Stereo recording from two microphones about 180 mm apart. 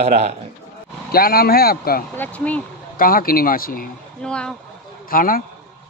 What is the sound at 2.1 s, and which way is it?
Speech, 10° left (ahead or behind).